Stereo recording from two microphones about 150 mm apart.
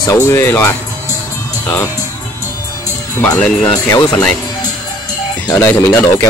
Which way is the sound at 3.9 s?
25° left (ahead or behind).